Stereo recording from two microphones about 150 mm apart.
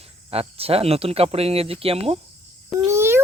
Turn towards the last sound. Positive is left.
turn(degrees=-15)  # may be behind; listen again after turning